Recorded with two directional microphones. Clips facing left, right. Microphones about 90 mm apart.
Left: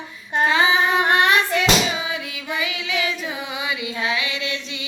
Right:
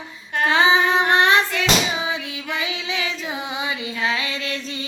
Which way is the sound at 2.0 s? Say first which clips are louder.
Right 2 dB; 25° right (ahead or behind).